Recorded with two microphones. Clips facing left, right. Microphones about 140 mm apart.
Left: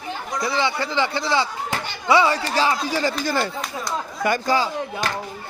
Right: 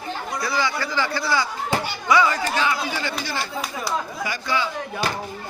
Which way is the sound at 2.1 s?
30° left (ahead or behind).